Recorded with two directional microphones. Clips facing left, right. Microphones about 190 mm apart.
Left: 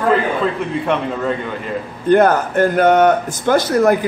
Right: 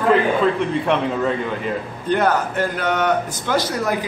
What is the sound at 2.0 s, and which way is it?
A man's voice, 50° left (ahead or behind).